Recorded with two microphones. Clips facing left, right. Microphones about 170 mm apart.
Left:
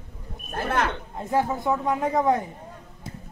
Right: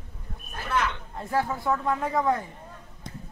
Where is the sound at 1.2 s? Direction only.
20° left (ahead or behind).